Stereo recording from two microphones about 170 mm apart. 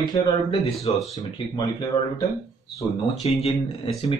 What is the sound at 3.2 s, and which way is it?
Speech, 35° left (ahead or behind).